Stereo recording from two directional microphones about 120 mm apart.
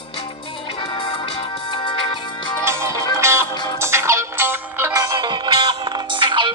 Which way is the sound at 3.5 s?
35° left (ahead or behind).